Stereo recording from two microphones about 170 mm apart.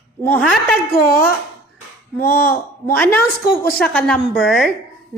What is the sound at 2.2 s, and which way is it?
Speech, 15° left (ahead or behind).